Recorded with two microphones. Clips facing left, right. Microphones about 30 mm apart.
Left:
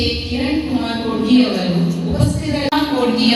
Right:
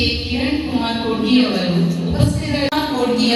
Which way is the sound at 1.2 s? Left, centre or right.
Right.